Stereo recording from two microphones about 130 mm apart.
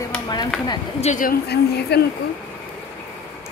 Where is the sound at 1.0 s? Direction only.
80° left.